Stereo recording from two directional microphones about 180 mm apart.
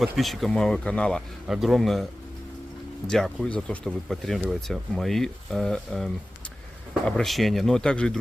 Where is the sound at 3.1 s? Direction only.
5° left (ahead or behind).